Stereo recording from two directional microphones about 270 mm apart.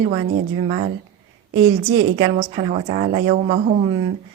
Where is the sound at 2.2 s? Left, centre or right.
Right.